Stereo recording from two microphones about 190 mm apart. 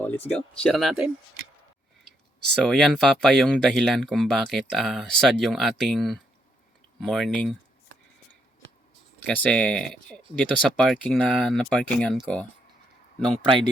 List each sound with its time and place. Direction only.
0.0 s speech: 10° left (ahead or behind)
2.6 s speech: centre (ahead or behind)
9.2 s speech: 5° left (ahead or behind)
13.3 s speech: 30° right (ahead or behind)